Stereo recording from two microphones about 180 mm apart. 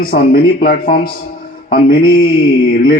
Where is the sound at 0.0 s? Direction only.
55° left (ahead or behind).